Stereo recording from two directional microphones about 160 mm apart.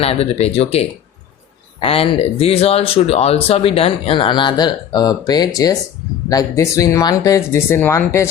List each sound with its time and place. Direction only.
0.0 s speech: 40° left (ahead or behind); by 8.3 s 15° left (ahead or behind)